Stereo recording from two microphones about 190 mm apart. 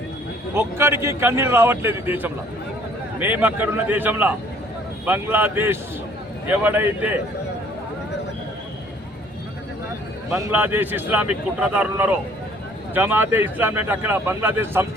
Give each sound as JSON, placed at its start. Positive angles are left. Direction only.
{"t": 0.5, "sound": "speech", "side_deg": -15}
{"t": 10.3, "sound": "speech", "side_deg": -10}